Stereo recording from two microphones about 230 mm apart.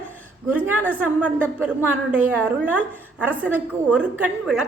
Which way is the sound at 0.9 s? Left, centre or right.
Centre.